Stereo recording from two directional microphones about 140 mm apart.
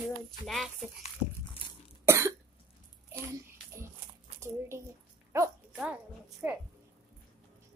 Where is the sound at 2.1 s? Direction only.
20° right (ahead or behind).